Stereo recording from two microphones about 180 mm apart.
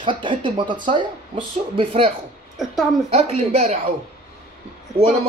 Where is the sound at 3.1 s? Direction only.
35° right (ahead or behind).